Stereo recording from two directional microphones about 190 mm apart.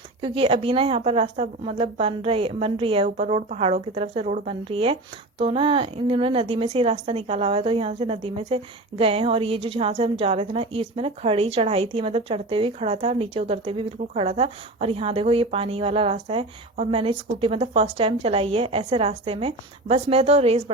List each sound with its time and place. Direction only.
0.2 s a woman's voice: 30° right (ahead or behind)